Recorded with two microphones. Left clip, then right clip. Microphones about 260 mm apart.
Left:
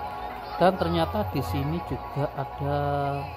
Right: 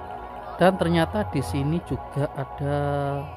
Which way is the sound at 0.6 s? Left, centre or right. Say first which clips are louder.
Right 2 dB; centre.